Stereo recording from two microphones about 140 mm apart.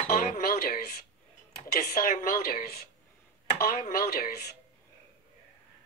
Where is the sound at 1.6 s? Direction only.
90° left.